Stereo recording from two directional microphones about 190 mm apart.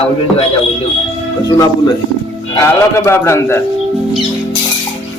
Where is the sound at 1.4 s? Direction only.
20° left (ahead or behind).